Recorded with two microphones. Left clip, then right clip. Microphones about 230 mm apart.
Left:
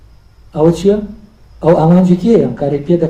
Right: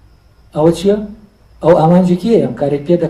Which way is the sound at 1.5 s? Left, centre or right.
Right.